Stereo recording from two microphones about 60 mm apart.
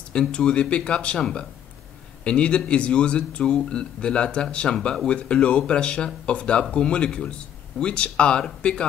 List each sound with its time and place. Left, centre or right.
0.1 s speech: centre